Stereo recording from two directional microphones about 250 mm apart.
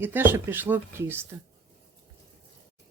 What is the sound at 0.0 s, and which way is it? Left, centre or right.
Speech, centre.